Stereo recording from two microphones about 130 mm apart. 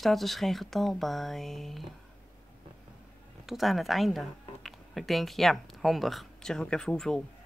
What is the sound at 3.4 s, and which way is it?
Speech, centre (ahead or behind).